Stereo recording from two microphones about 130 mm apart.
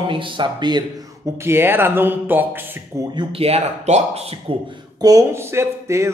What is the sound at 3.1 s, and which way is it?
Speech, 50° right (ahead or behind).